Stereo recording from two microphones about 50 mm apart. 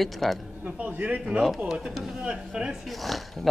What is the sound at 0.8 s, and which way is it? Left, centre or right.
Speech, right.